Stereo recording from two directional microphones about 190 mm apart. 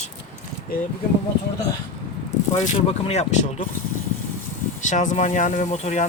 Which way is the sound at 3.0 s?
35° left (ahead or behind).